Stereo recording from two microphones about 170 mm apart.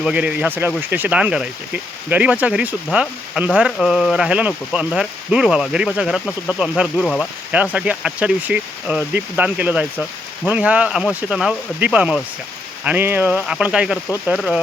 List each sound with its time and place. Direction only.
0.0 s speech: 5° right (ahead or behind)
7.5 s speech: 10° right (ahead or behind)